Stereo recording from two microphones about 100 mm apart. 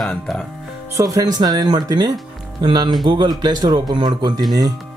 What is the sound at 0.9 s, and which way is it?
A man's voice, 35° right (ahead or behind).